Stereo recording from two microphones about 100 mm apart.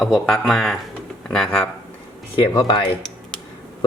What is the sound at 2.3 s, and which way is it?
Speech, 60° left (ahead or behind).